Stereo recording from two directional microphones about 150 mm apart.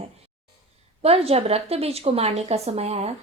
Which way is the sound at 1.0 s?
40° right (ahead or behind).